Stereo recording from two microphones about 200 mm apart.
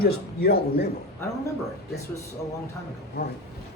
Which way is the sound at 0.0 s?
50° left (ahead or behind).